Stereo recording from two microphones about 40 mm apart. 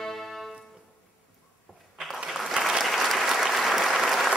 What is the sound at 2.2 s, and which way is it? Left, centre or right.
Applause, centre.